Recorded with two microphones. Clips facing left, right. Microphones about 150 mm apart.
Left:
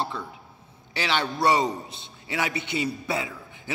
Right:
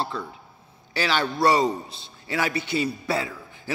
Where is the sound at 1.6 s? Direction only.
30° right (ahead or behind).